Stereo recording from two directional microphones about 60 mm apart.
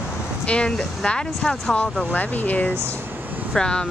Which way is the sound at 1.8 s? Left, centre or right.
Left.